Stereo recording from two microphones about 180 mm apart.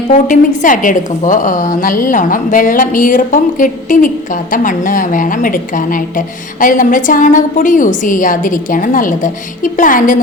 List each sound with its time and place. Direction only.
0.1 s a woman's voice: 45° left (ahead or behind)